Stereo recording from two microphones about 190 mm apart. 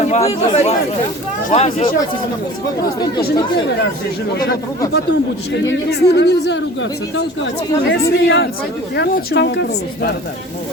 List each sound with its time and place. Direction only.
0.0 s speech: 35° left (ahead or behind)
5.6 s speech: 60° left (ahead or behind)
7.9 s speech: 65° left (ahead or behind)